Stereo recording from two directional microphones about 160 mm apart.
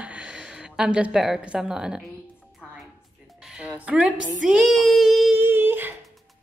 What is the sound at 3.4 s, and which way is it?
Music, 5° right (ahead or behind).